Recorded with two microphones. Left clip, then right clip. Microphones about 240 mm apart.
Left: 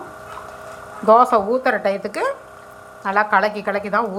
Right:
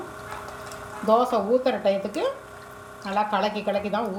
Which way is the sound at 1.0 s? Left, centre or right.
Left.